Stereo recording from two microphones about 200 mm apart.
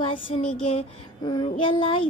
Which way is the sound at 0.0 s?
25° left (ahead or behind).